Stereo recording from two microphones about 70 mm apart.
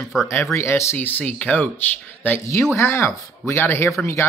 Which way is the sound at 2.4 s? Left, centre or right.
Left.